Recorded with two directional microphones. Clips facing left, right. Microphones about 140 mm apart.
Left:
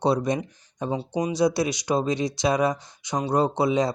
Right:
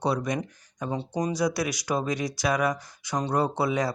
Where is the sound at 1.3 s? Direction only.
25° left (ahead or behind).